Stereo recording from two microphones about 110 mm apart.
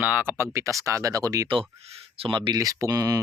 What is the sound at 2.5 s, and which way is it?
Speech, 35° right (ahead or behind).